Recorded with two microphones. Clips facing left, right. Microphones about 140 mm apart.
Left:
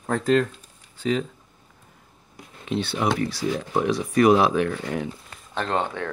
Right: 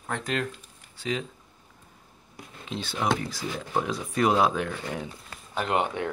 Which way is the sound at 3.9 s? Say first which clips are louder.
Left 9 dB; 80° left.